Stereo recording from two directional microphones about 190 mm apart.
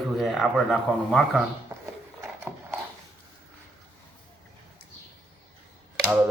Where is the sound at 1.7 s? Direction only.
15° right (ahead or behind).